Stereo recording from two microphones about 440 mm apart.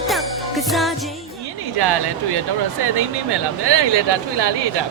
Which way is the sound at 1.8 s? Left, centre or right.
Right.